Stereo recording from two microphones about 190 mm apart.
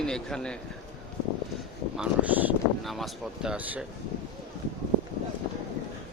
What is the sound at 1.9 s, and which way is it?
Speech, 10° right (ahead or behind).